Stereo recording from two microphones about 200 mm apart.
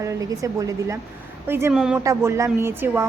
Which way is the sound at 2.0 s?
15° right (ahead or behind).